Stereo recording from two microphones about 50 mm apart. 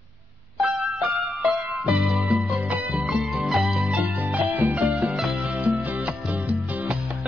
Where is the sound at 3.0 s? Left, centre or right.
Centre.